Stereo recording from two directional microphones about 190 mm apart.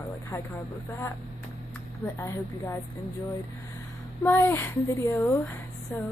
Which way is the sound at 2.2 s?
15° left (ahead or behind).